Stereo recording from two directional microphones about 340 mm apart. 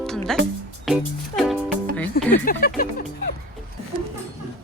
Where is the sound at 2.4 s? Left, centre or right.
Left.